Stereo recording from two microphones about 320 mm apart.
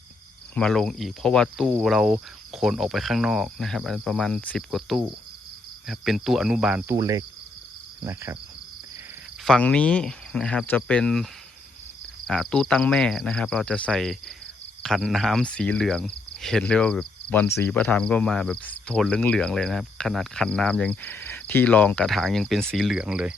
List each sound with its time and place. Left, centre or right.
0.5 s speech: centre
8.0 s cricket: centre
9.4 s speech: centre
12.3 s speech: centre